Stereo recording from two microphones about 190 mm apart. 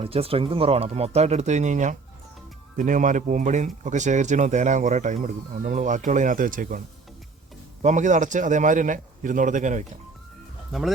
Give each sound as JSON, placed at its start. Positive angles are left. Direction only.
{"t": 0.0, "sound": "speech", "side_deg": -30}
{"t": 10.7, "sound": "speech", "side_deg": 0}